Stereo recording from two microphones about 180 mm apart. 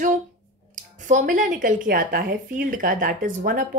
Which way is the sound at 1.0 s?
45° right (ahead or behind).